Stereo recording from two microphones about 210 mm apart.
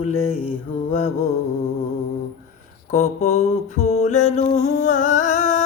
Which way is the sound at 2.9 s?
30° left (ahead or behind).